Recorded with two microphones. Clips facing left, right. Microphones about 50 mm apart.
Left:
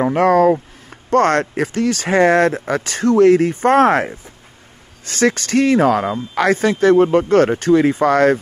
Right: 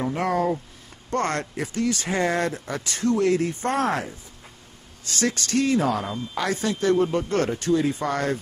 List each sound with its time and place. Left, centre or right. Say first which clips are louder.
0.0 s speech: left 11 dB; left
5.0 s speech: left 9 dB; left